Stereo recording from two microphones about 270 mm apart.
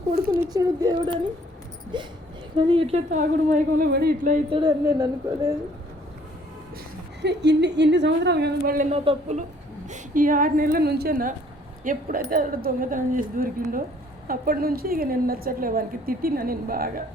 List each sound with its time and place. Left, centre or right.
0.1 s a woman's voice: right
0.3 s a woman's voice: centre
7.2 s a woman's voice: right